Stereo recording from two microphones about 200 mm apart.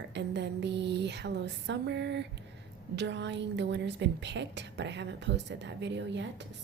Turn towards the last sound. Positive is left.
turn(degrees=-60)  # may be behind; listen again after turning